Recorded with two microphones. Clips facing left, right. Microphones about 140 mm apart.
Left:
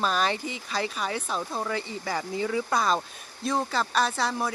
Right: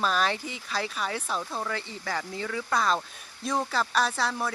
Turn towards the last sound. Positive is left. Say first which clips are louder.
# left 1 dB
turn(degrees=-5)  # may be behind; listen again after turning